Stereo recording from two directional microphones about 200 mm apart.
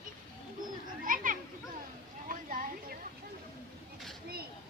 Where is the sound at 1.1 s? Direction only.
40° right (ahead or behind).